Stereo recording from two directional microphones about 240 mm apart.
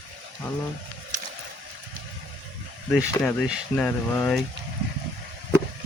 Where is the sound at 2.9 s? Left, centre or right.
Centre.